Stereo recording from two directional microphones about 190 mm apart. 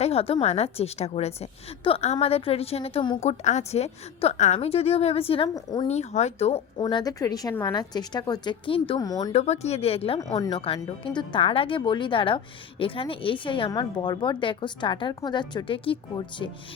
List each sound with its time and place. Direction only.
0.0 s a woman's voice: 30° left (ahead or behind)
5.9 s a woman's voice: 35° left (ahead or behind)
6.7 s speech: 20° left (ahead or behind)
9.3 s a woman's voice: 35° left (ahead or behind)